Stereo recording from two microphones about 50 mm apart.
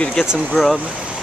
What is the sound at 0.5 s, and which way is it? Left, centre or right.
Speech, centre.